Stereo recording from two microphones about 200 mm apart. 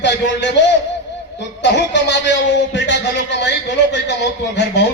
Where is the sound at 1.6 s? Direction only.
60° left (ahead or behind).